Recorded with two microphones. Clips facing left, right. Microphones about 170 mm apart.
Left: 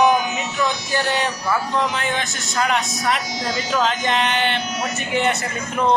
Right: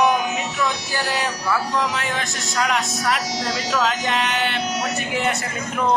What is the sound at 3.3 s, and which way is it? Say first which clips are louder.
Speech: even; 75° right (ahead or behind).